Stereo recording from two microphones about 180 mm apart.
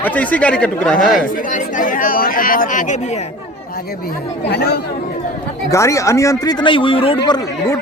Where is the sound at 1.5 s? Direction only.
50° left (ahead or behind).